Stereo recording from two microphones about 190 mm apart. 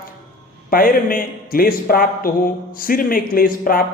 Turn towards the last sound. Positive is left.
turn(degrees=50)  # may be behind; listen again after turning